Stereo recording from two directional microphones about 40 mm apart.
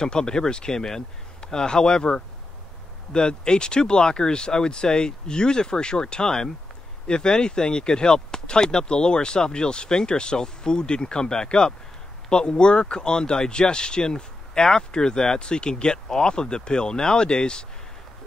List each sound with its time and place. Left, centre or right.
0.0 s speech: centre